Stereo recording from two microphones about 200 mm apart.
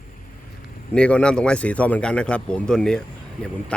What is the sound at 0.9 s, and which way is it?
Speech, 5° left (ahead or behind).